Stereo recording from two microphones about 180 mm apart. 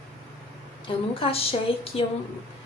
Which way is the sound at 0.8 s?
30° left (ahead or behind).